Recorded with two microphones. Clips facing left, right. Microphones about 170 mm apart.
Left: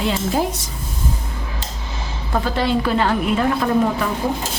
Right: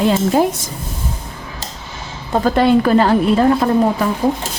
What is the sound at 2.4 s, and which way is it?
A woman's voice, 45° right (ahead or behind).